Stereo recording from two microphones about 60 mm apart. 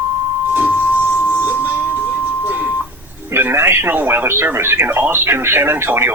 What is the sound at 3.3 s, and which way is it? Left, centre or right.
Speech, right.